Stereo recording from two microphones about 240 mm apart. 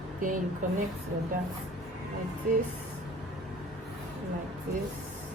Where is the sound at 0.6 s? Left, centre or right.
Right.